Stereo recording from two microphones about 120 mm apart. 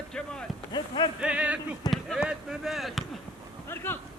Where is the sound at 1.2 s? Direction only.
10° right (ahead or behind).